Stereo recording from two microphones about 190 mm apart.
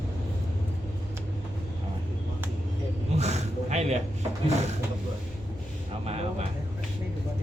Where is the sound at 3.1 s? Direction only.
35° right (ahead or behind).